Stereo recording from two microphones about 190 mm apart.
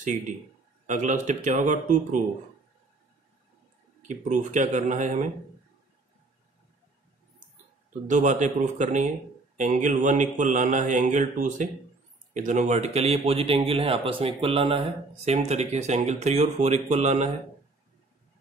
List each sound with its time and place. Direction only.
0.8 s a man's voice: 40° right (ahead or behind)
4.1 s a man's voice: 40° right (ahead or behind)
8.1 s a man's voice: 40° right (ahead or behind)